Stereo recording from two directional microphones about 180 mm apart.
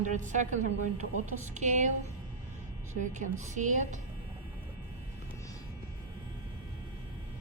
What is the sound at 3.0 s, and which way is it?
A woman's voice, 40° right (ahead or behind).